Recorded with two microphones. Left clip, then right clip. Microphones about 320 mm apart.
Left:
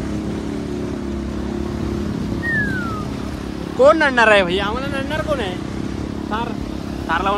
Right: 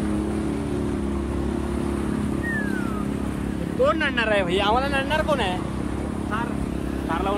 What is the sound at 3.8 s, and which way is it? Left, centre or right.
Speech, centre.